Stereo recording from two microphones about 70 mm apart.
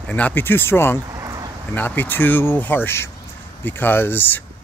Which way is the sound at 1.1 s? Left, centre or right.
Right.